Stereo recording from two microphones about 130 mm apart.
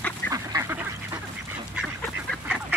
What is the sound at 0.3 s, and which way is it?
Duck, 25° right (ahead or behind).